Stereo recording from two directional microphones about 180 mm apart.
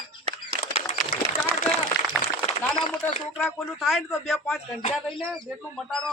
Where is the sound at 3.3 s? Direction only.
Centre (ahead or behind).